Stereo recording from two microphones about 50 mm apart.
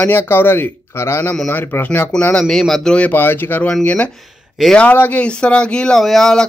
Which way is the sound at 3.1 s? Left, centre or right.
Left.